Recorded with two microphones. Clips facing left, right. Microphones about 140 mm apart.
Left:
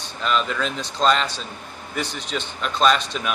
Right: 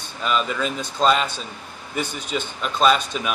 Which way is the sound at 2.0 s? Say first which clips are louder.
Right 1 dB; 50° right (ahead or behind).